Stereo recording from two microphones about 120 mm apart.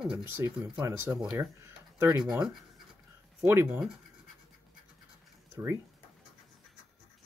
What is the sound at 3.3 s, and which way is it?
Speech, 20° right (ahead or behind).